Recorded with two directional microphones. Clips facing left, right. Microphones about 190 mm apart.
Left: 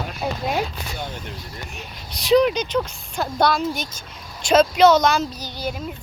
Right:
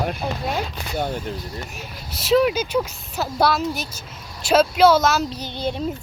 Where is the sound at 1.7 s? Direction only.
5° right (ahead or behind).